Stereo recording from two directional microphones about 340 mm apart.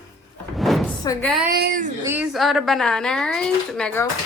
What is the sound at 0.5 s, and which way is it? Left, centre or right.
Door, centre.